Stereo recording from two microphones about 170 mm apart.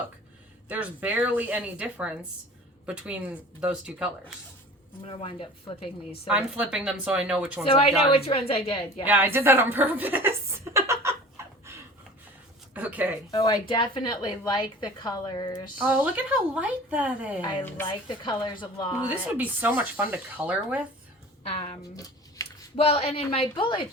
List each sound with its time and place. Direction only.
0.7 s speech: 10° right (ahead or behind)
5.0 s speech: 30° left (ahead or behind)
6.2 s speech: 5° right (ahead or behind)
7.7 s speech: 35° left (ahead or behind)
9.0 s a woman's voice: 10° right (ahead or behind)
11.4 s a sound: 15° right (ahead or behind)
12.7 s speech: 10° right (ahead or behind)
13.3 s a woman's voice: 30° left (ahead or behind)
15.8 s speech: 10° right (ahead or behind)
17.8 s a woman's voice: 25° left (ahead or behind)
19.0 s speech: 10° right (ahead or behind)
21.5 s speech: 35° left (ahead or behind)
21.9 s a sound: 20° left (ahead or behind)
22.7 s speech: 35° left (ahead or behind)